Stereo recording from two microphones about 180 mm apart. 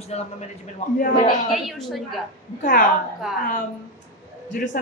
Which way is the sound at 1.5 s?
Centre (ahead or behind).